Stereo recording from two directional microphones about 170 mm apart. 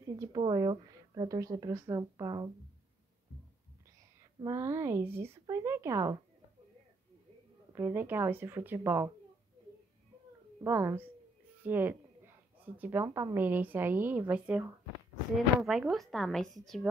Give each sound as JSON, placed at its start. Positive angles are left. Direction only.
{"t": 0.1, "sound": "speech", "side_deg": -25}
{"t": 4.2, "sound": "a woman's voice", "side_deg": -20}
{"t": 7.7, "sound": "a woman's voice", "side_deg": -15}
{"t": 10.6, "sound": "a woman's voice", "side_deg": -15}